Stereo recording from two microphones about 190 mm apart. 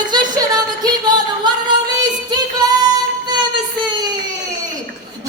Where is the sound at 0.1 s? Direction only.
20° right (ahead or behind).